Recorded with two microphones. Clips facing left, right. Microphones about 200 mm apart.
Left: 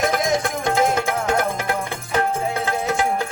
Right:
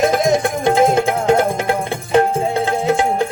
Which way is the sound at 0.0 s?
25° right (ahead or behind).